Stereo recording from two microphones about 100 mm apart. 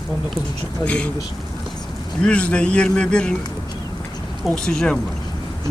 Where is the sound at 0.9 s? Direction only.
10° left (ahead or behind).